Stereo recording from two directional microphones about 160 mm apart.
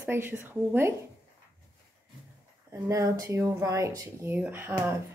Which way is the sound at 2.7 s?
20° right (ahead or behind).